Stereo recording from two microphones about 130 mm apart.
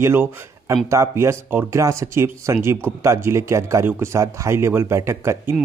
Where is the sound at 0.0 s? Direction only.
20° right (ahead or behind).